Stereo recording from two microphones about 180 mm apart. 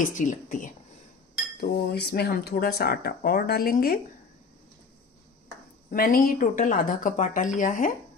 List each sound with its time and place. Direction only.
0.0 s speech: 45° left (ahead or behind)
1.6 s speech: 60° left (ahead or behind)
5.9 s speech: 55° left (ahead or behind)